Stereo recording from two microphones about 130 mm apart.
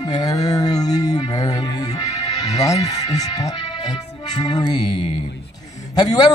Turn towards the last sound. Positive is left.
turn(degrees=30)  # may be behind; listen again after turning